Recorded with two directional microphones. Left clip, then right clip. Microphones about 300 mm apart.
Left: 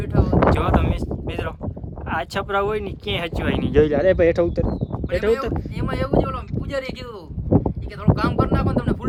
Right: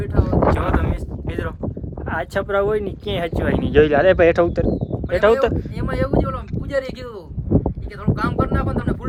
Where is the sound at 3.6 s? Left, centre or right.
Left.